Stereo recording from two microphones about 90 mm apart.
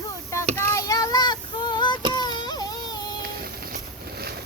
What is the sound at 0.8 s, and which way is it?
Child singing, 40° left (ahead or behind).